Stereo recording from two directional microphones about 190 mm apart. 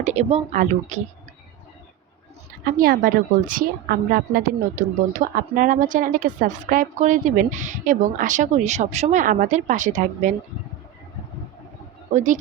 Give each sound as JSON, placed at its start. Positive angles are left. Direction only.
{"t": 0.0, "sound": "speech", "side_deg": -35}
{"t": 2.6, "sound": "a woman's voice", "side_deg": -50}
{"t": 12.1, "sound": "speech", "side_deg": -40}